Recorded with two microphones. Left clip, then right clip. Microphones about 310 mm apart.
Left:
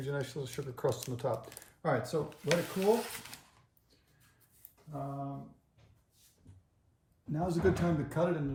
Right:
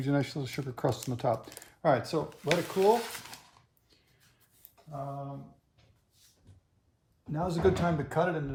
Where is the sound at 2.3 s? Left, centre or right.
Centre.